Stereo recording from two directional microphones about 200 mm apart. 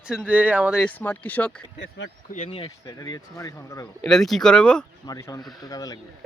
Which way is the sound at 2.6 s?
15° left (ahead or behind).